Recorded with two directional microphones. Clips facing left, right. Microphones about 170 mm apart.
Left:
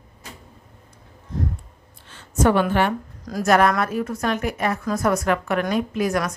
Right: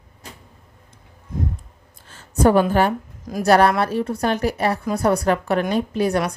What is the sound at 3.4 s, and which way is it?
A woman's voice, 35° right (ahead or behind).